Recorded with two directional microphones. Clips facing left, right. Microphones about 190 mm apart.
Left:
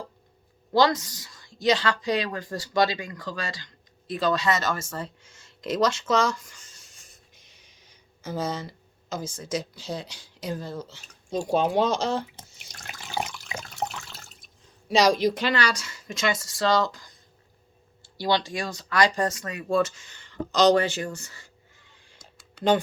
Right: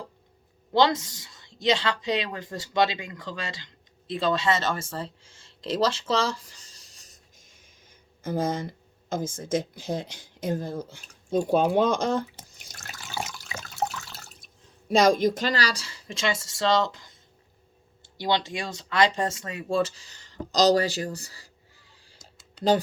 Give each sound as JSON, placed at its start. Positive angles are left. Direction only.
{"t": 0.7, "sound": "a woman's voice", "side_deg": -25}
{"t": 12.8, "sound": "water", "side_deg": -40}
{"t": 14.8, "sound": "speech", "side_deg": -50}
{"t": 18.2, "sound": "speech", "side_deg": -20}